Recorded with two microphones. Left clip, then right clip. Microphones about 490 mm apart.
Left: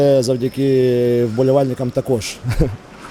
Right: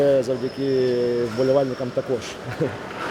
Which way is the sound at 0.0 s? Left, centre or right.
Left.